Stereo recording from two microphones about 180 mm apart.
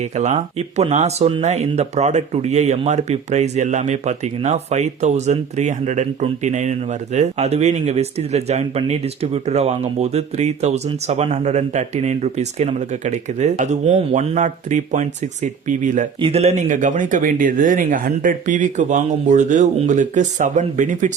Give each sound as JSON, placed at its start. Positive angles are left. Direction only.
{"t": 0.2, "sound": "speech", "side_deg": -40}
{"t": 16.2, "sound": "speech", "side_deg": -35}